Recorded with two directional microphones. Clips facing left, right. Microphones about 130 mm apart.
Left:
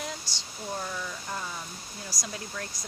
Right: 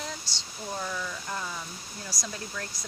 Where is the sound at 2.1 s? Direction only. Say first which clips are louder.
Even; 20° left (ahead or behind).